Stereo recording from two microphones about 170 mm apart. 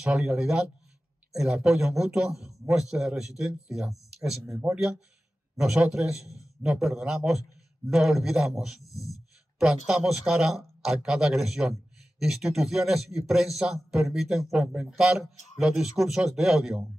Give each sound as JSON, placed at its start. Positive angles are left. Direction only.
{"t": 0.0, "sound": "a man's voice", "side_deg": -5}
{"t": 8.8, "sound": "speech", "side_deg": 20}
{"t": 9.8, "sound": "a man's voice", "side_deg": -5}